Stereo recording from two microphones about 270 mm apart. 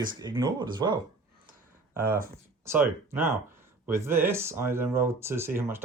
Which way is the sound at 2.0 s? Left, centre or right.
Right.